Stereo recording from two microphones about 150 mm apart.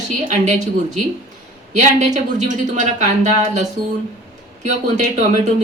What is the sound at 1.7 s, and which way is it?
A woman's voice, 55° right (ahead or behind).